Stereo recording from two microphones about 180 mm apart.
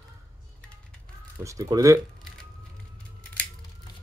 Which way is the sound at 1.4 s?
20° right (ahead or behind).